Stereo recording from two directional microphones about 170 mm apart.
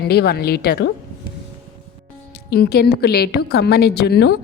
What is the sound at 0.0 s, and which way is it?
Speech, 65° left (ahead or behind).